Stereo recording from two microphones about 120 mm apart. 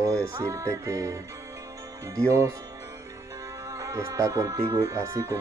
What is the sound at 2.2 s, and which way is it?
Music, 25° right (ahead or behind).